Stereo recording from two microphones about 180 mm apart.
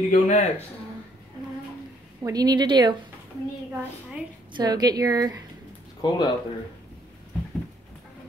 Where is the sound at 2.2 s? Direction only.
20° right (ahead or behind).